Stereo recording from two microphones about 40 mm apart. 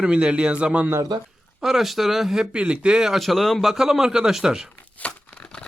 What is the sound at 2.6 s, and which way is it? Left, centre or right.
Speech, right.